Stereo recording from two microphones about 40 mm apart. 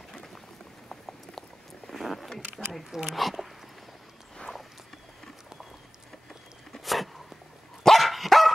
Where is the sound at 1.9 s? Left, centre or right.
Centre.